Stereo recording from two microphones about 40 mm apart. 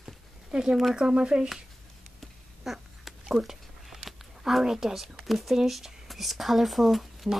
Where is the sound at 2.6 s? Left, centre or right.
Centre.